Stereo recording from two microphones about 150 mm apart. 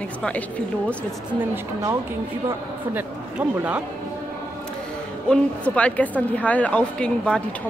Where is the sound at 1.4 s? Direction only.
15° right (ahead or behind).